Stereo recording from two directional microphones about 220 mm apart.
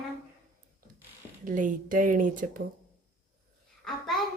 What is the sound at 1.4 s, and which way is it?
A woman's voice, 35° right (ahead or behind).